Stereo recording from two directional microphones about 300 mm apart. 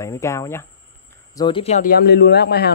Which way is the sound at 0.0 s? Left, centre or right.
Centre.